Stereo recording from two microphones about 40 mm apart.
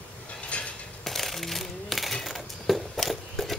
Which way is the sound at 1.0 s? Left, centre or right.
Centre.